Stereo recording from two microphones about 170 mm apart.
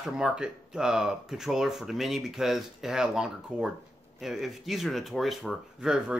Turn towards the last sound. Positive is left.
turn(degrees=-5)  # may be behind; listen again after turning